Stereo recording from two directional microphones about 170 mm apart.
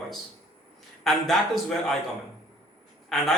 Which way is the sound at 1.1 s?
Centre (ahead or behind).